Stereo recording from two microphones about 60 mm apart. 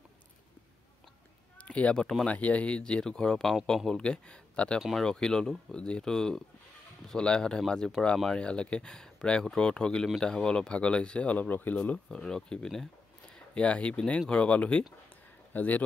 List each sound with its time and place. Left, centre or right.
1.6 s speech: left
4.7 s speech: centre; by 12.2 s left
12.2 s speech: centre
13.6 s speech: left